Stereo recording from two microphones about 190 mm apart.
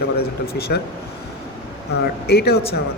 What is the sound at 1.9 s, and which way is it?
Speech, 60° left (ahead or behind).